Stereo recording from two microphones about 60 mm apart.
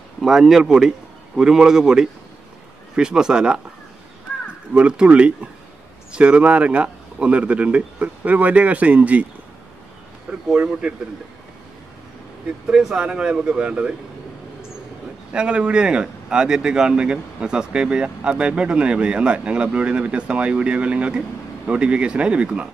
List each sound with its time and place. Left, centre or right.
0.2 s a man's voice: centre
4.7 s a man's voice: centre
10.5 s a man's voice: right
12.6 s speech: centre
15.3 s speech: centre